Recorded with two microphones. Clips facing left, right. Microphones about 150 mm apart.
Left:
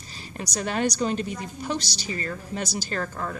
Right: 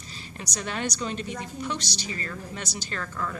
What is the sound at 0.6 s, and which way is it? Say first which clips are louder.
Speech: left 6 dB; 40° left (ahead or behind).